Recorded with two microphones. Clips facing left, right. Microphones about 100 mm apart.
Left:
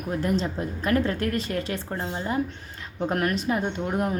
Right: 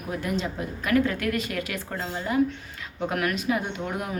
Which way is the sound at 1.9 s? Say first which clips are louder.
Right 1 dB; 20° left (ahead or behind).